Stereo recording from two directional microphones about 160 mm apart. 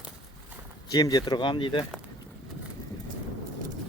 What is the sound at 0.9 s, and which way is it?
Speech, 25° left (ahead or behind).